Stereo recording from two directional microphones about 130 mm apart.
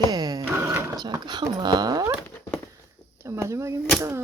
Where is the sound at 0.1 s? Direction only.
30° right (ahead or behind).